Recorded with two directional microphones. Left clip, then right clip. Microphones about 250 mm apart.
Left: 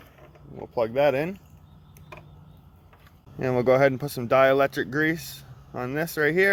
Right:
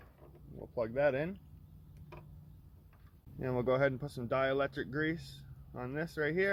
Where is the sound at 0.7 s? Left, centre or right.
Left.